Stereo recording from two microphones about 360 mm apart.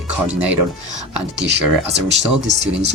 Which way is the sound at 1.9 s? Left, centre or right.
Right.